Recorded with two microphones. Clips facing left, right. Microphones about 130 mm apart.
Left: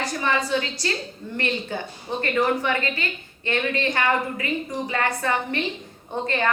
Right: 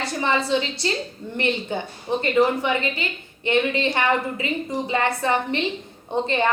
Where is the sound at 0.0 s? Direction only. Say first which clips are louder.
Right 1 dB; 25° right (ahead or behind).